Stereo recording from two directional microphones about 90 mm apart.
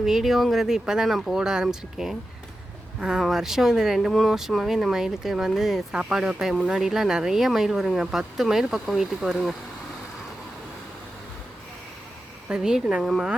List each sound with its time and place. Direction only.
0.0 s speech: 5° right (ahead or behind)
12.5 s speech: 10° right (ahead or behind)